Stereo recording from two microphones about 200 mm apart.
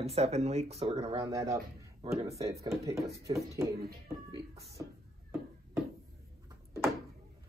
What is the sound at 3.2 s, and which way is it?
Speech, 15° right (ahead or behind).